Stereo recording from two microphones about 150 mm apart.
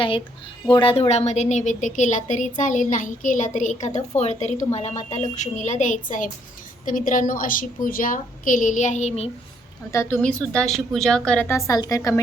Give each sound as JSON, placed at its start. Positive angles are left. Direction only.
{"t": 0.7, "sound": "a woman's voice", "side_deg": 35}
{"t": 9.9, "sound": "a woman's voice", "side_deg": 20}
{"t": 10.2, "sound": "a woman's voice", "side_deg": 5}